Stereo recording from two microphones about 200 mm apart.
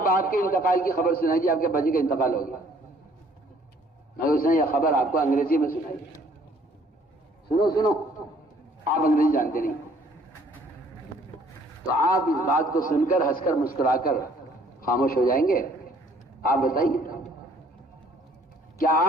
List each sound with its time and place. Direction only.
0.0 s a man's voice: 45° left (ahead or behind)
4.2 s a man's voice: 45° left (ahead or behind)
7.6 s a man's voice: 20° left (ahead or behind)
8.8 s a man's voice: 45° left (ahead or behind)
12.5 s a man's voice: 45° left (ahead or behind)
18.8 s speech: 45° left (ahead or behind)